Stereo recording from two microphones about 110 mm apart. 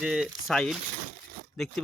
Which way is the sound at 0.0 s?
5° right (ahead or behind).